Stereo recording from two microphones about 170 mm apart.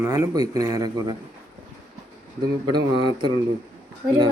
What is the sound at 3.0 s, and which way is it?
Speech, 25° right (ahead or behind).